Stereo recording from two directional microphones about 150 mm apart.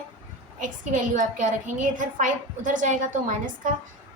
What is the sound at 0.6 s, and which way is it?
A woman's voice, 60° right (ahead or behind).